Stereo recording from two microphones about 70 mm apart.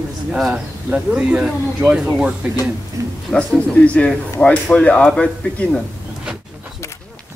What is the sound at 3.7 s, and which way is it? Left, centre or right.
Speech, centre.